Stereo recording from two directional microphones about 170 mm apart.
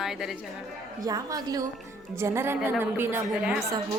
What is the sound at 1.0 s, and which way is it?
A woman's voice, 20° right (ahead or behind).